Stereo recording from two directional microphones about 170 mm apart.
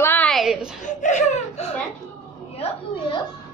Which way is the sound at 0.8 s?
45° left (ahead or behind).